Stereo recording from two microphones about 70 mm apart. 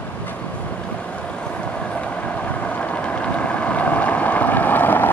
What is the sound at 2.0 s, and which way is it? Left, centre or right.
Vehicle, centre.